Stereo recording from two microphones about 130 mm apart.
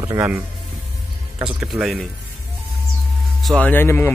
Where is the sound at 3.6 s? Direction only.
15° left (ahead or behind).